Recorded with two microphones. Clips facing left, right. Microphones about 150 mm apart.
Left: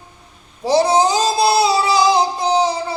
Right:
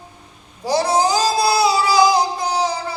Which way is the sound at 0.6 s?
25° left (ahead or behind).